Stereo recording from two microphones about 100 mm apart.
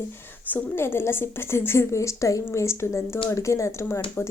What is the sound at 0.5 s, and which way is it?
A woman's voice, 25° left (ahead or behind).